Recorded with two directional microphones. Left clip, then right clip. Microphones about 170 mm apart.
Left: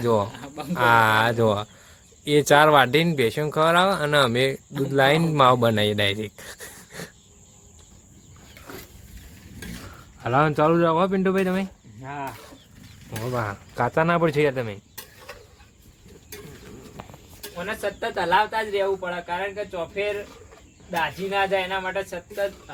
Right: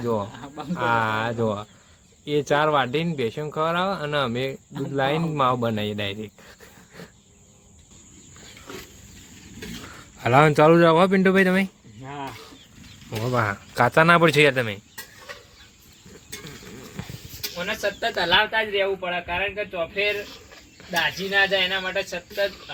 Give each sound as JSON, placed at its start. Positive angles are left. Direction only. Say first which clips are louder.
{"t": 0.0, "sound": "speech", "louder": "left 4 dB", "side_deg": 20}
{"t": 0.3, "sound": "cricket", "louder": "left 1 dB", "side_deg": -10}
{"t": 0.7, "sound": "speech", "louder": "left 5 dB", "side_deg": 20}
{"t": 10.2, "sound": "speech", "louder": "right 4 dB", "side_deg": -30}
{"t": 12.0, "sound": "speech", "louder": "left 2 dB", "side_deg": -5}
{"t": 13.1, "sound": "speech", "louder": "right 4 dB", "side_deg": -30}
{"t": 13.7, "sound": "speech", "louder": "right 5 dB", "side_deg": -20}
{"t": 18.4, "sound": "speech", "louder": "right 1 dB", "side_deg": 5}
{"t": 19.5, "sound": "speech", "louder": "right 2 dB", "side_deg": 25}